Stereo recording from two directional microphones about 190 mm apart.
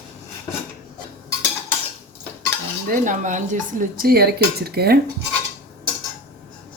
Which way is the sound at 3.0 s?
40° right (ahead or behind).